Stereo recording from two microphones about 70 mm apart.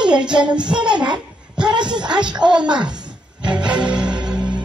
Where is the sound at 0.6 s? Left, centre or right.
Centre.